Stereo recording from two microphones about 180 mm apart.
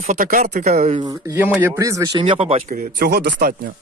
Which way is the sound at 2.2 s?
30° right (ahead or behind).